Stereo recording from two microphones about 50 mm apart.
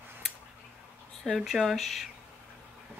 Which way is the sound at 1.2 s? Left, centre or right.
Centre.